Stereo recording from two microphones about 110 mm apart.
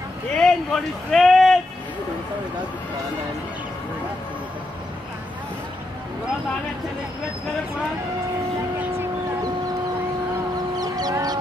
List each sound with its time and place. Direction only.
0.3 s speech: 5° left (ahead or behind)
10.8 s chicken: 35° right (ahead or behind)